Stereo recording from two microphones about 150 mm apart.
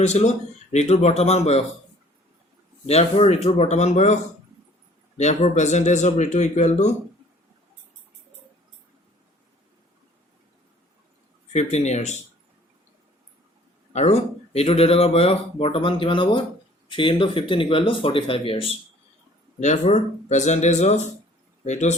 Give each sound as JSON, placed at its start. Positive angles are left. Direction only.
{"t": 0.0, "sound": "speech", "side_deg": 50}
{"t": 2.8, "sound": "speech", "side_deg": 45}
{"t": 11.5, "sound": "speech", "side_deg": 50}
{"t": 13.9, "sound": "speech", "side_deg": 45}
{"t": 19.5, "sound": "speech", "side_deg": 50}